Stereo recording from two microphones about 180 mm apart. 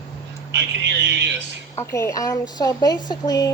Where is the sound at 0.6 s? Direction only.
75° right (ahead or behind).